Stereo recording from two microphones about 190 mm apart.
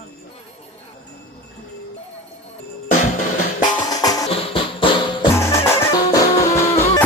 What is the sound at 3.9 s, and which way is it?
Music, 20° left (ahead or behind).